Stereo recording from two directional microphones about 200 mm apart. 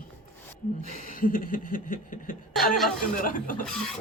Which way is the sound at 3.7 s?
Centre (ahead or behind).